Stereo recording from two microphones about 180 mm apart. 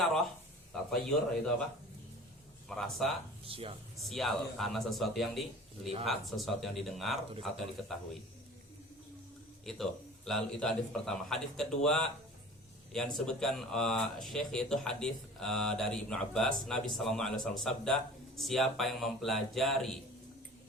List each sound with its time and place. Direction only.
0.0 s a sound: centre (ahead or behind)
0.7 s speech: 5° left (ahead or behind)
2.6 s speech: centre (ahead or behind)
3.4 s speech: 30° right (ahead or behind)
3.9 s speech: centre (ahead or behind)
9.6 s speech: centre (ahead or behind)